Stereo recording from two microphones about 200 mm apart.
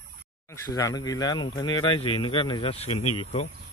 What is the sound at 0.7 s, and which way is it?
Speech, 20° left (ahead or behind).